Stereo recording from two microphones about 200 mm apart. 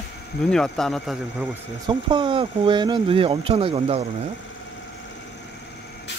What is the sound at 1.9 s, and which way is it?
Speech, 25° right (ahead or behind).